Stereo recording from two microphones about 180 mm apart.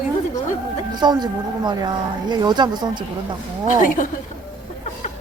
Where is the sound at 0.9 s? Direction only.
25° right (ahead or behind).